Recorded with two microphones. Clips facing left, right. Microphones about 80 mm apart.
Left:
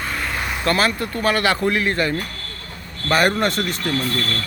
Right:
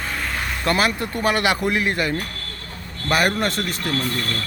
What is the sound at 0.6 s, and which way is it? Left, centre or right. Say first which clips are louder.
Speech: left 1 dB; centre.